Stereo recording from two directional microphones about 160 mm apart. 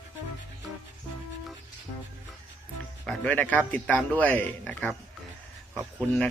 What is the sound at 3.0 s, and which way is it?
A man's voice, 10° left (ahead or behind).